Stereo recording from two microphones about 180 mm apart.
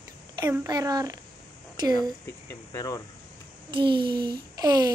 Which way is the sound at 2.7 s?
20° left (ahead or behind).